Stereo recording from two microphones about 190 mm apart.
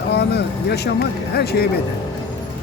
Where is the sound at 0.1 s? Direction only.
60° left (ahead or behind).